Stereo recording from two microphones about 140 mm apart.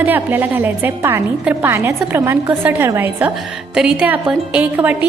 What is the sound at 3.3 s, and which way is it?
Speech, centre (ahead or behind).